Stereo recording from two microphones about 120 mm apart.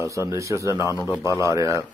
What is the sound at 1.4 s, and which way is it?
Speech, 25° right (ahead or behind).